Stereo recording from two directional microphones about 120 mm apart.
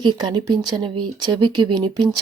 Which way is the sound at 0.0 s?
40° right (ahead or behind).